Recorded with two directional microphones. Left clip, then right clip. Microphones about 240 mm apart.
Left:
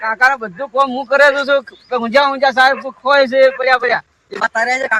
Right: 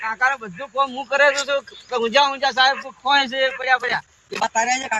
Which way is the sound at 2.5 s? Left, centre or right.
Left.